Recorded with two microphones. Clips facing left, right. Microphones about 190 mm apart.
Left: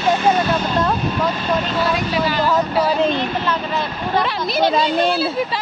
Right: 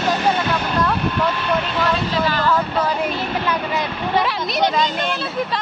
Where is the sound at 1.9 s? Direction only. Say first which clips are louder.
Left 1 dB; 15° left (ahead or behind).